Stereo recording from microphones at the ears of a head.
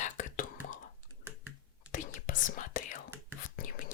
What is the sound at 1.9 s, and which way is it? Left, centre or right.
Whispering, left.